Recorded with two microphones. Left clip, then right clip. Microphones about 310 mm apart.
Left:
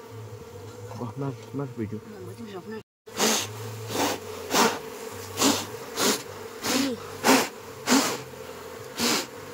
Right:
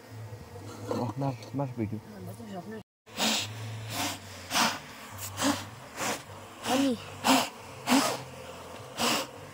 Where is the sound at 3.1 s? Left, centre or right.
Centre.